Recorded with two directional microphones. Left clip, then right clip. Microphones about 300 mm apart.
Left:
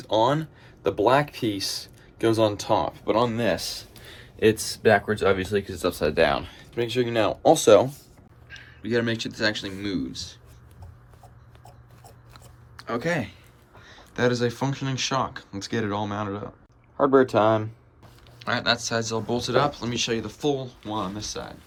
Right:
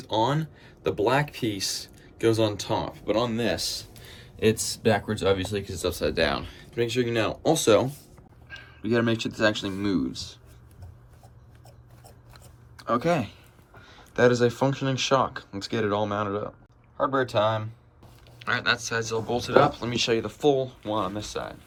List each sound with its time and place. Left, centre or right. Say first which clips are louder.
0.0 s speech: left 3 dB; centre
6.0 s speech: left 4 dB; centre
12.0 s chewing: left 2 dB; centre
13.8 s speech: right 3 dB; centre
18.3 s speech: left 1 dB; centre